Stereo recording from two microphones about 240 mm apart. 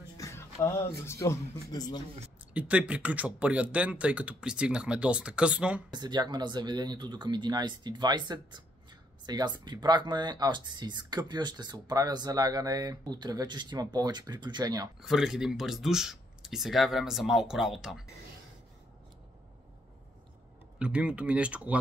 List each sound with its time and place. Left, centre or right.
0.2 s speech: centre
2.5 s speech: centre
5.9 s speech: centre
15.0 s speech: centre
20.8 s speech: centre